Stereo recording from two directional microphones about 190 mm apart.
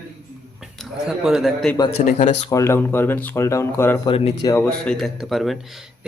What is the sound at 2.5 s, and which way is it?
Speech, 15° left (ahead or behind).